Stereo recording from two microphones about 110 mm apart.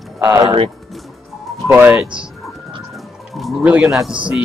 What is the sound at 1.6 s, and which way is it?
Speech, 20° right (ahead or behind).